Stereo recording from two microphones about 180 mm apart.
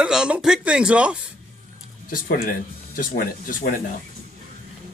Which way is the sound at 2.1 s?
50° left (ahead or behind).